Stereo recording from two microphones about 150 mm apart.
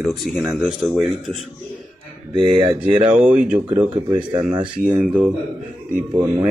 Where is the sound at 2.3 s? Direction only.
35° right (ahead or behind).